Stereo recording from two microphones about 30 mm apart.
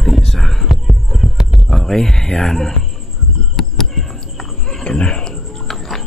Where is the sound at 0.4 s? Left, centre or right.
Centre.